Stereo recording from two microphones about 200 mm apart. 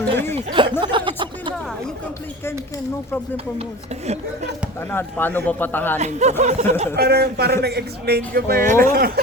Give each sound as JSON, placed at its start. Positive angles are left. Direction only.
{"t": 0.3, "sound": "speech", "side_deg": -25}
{"t": 0.8, "sound": "music", "side_deg": -25}
{"t": 4.9, "sound": "speech", "side_deg": 10}
{"t": 6.0, "sound": "speech", "side_deg": -35}
{"t": 6.9, "sound": "a man's voice", "side_deg": -50}